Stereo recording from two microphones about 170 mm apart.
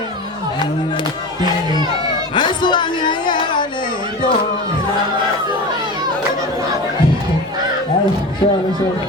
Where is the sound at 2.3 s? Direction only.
25° left (ahead or behind).